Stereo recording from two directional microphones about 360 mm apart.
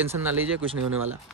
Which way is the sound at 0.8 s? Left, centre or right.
Right.